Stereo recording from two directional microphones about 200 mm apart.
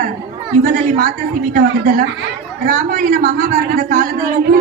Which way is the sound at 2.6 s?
45° right (ahead or behind).